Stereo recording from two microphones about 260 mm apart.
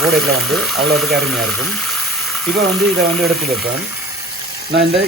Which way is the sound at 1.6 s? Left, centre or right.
Centre.